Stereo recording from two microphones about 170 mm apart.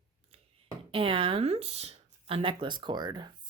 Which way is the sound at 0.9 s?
30° right (ahead or behind).